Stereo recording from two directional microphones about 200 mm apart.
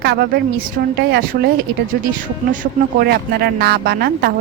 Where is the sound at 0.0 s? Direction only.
55° right (ahead or behind).